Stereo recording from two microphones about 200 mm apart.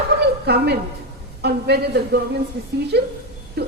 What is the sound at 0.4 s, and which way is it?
A woman's voice, 55° right (ahead or behind).